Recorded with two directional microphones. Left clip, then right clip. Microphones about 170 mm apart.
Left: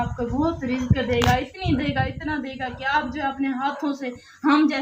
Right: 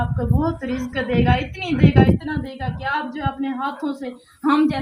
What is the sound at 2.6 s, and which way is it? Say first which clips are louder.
A woman's voice: left 1 dB; 5° left (ahead or behind).